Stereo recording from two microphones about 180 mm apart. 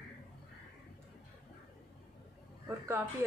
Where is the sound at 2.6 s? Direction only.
15° right (ahead or behind).